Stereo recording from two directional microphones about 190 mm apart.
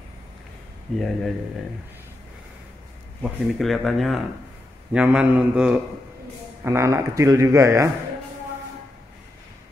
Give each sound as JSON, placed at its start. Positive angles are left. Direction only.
{"t": 0.9, "sound": "speech", "side_deg": 0}
{"t": 3.2, "sound": "a man's voice", "side_deg": 0}